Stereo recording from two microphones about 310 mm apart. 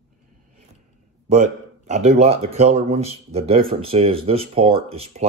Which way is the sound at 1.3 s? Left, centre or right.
Right.